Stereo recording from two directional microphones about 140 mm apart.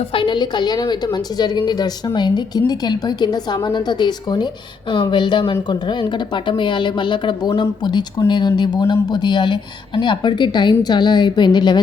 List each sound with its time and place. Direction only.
0.1 s a woman's voice: 35° left (ahead or behind)